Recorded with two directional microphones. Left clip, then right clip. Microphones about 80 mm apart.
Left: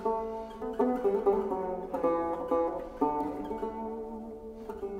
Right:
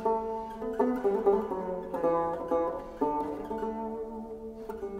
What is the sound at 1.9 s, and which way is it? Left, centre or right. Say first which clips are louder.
Music: right 2 dB; centre.